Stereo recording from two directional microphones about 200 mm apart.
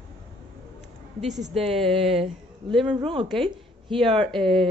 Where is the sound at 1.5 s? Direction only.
30° right (ahead or behind).